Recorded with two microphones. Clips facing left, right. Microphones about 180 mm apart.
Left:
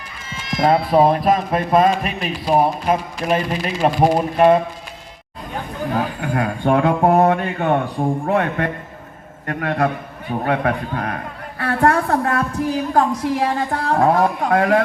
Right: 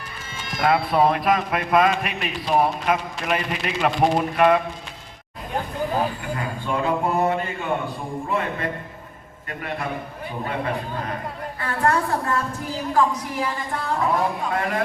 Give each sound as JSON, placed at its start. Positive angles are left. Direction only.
{"t": 0.6, "sound": "a man's voice", "side_deg": 30}
{"t": 6.1, "sound": "a woman's voice", "side_deg": 65}
{"t": 11.6, "sound": "a sound", "side_deg": 60}
{"t": 12.9, "sound": "a woman's voice", "side_deg": 60}